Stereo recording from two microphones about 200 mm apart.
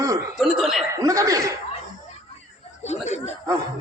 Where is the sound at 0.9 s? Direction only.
15° right (ahead or behind).